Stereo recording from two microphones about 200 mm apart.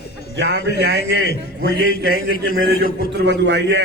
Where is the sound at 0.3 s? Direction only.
60° right (ahead or behind).